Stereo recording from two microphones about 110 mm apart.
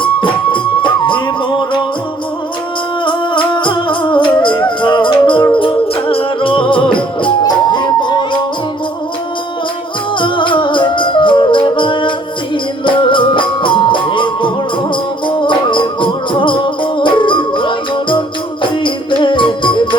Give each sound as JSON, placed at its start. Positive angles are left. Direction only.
{"t": 0.0, "sound": "music", "side_deg": 50}
{"t": 3.0, "sound": "music", "side_deg": 45}
{"t": 10.2, "sound": "music", "side_deg": 50}